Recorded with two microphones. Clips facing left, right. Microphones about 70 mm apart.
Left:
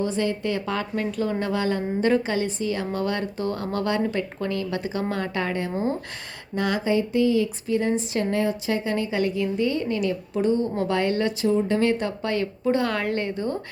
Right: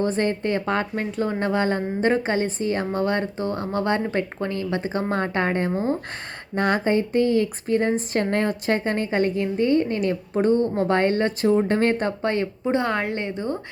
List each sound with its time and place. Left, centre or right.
0.0 s speech: right